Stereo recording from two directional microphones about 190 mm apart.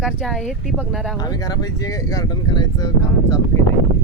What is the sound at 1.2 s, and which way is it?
Speech, 20° left (ahead or behind).